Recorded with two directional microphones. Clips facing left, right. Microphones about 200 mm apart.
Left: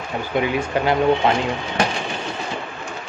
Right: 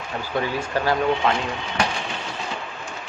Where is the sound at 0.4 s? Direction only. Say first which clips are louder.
Left 4 dB; 20° left (ahead or behind).